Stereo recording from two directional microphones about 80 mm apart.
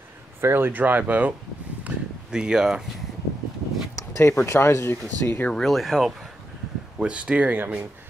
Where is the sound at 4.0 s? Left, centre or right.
Left.